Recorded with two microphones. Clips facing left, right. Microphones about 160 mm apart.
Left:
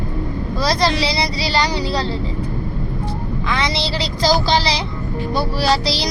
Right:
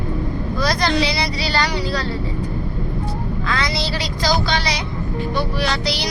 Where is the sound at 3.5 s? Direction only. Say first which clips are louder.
Left 2 dB; 25° left (ahead or behind).